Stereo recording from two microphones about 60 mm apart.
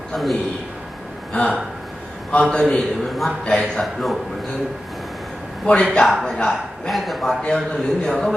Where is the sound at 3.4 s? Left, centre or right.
Centre.